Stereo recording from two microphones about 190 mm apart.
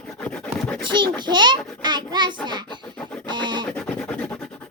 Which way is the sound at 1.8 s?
25° right (ahead or behind).